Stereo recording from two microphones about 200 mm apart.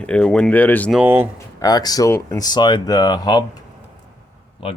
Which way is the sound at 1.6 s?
20° left (ahead or behind).